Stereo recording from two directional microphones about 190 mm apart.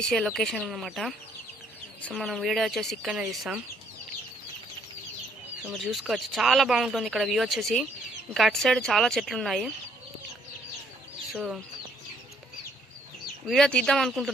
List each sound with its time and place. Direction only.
0.0 s speech: 5° left (ahead or behind)
5.6 s speech: centre (ahead or behind)
11.3 s speech: 5° right (ahead or behind)
13.5 s speech: 5° left (ahead or behind)